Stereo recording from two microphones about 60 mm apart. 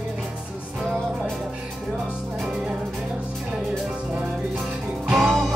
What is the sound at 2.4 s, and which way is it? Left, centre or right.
Music, centre.